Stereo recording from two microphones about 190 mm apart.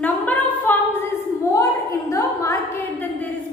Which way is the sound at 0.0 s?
10° left (ahead or behind).